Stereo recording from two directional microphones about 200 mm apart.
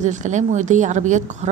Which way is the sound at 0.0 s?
35° right (ahead or behind).